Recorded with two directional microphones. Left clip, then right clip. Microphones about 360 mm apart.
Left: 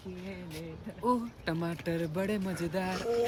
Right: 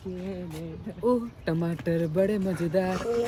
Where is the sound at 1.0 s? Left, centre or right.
Centre.